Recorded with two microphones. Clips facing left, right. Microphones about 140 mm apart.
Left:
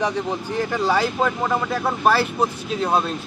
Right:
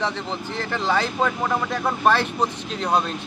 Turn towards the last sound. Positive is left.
turn(degrees=5)  # may be behind; listen again after turning